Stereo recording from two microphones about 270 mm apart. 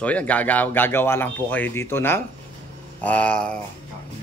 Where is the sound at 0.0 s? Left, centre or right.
Centre.